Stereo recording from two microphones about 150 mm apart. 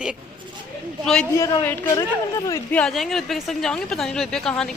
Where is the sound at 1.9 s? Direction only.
25° left (ahead or behind).